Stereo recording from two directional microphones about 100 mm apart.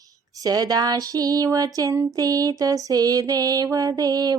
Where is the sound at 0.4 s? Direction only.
40° right (ahead or behind).